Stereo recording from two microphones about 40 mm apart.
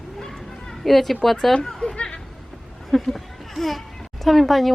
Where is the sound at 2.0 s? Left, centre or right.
Left.